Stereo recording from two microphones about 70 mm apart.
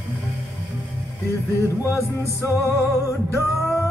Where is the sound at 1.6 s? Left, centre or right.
Left.